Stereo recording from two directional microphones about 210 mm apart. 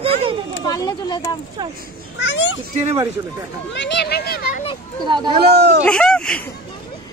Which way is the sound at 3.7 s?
55° left (ahead or behind).